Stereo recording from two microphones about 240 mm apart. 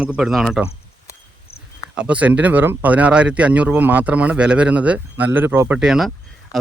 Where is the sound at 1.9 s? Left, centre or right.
Centre.